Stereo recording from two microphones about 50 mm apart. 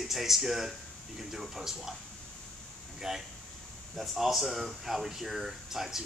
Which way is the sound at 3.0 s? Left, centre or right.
Centre.